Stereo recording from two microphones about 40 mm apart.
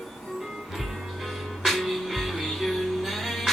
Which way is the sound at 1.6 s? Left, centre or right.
Centre.